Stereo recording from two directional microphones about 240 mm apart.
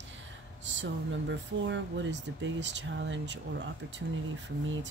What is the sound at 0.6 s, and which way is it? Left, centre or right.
Speech, right.